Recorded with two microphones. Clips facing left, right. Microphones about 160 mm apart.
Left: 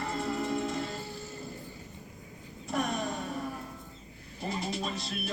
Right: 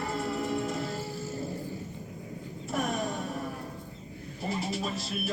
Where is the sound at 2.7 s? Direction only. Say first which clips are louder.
Right 1 dB; centre (ahead or behind).